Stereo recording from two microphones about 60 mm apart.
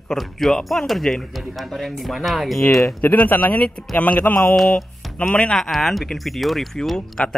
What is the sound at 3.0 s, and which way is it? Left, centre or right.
Speech, left.